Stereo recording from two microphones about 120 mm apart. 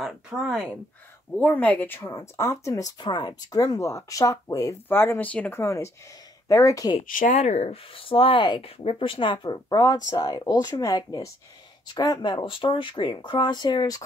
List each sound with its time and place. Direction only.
0.0 s speech: centre (ahead or behind)
1.3 s speech: 10° left (ahead or behind); by 4.7 s 30° left (ahead or behind)
4.8 s speech: 20° left (ahead or behind)
5.6 s speech: 25° left (ahead or behind)
7.0 s speech: 75° left (ahead or behind); by 14.0 s 35° left (ahead or behind)